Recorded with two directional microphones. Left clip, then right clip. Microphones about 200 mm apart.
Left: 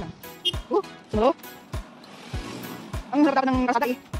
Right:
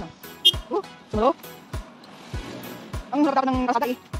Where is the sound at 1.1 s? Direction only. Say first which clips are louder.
Even; 10° left (ahead or behind).